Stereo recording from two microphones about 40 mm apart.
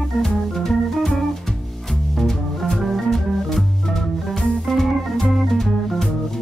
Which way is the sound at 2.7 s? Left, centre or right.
Centre.